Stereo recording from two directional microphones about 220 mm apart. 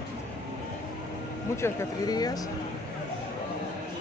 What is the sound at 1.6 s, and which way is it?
Speech, 15° left (ahead or behind).